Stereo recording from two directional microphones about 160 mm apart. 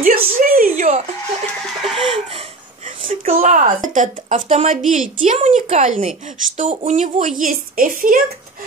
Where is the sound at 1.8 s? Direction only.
Centre (ahead or behind).